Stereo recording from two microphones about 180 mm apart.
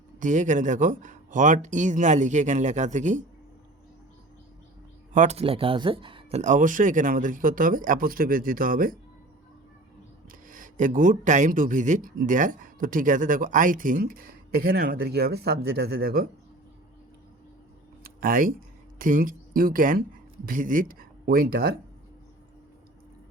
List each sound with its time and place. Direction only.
0.2 s speech: 45° right (ahead or behind)
5.1 s speech: 40° right (ahead or behind)
6.4 s speech: 45° right (ahead or behind)
10.4 s speech: 50° right (ahead or behind)
18.0 s a sound: 50° right (ahead or behind)
18.9 s speech: 50° right (ahead or behind)